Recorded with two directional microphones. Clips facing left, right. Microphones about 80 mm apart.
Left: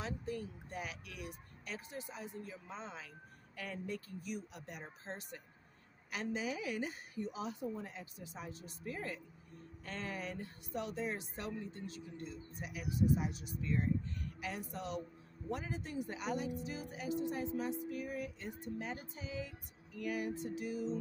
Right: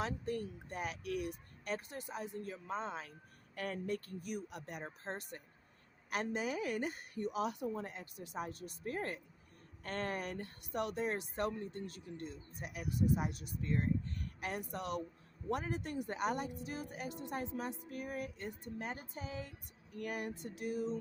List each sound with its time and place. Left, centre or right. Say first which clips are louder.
0.0 s speech: right 3 dB; right